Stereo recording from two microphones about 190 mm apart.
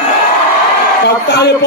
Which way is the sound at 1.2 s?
60° left (ahead or behind).